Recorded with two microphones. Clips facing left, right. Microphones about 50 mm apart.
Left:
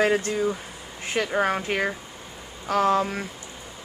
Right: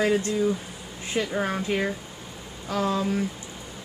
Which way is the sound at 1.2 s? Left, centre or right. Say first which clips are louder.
Left 3 dB; left.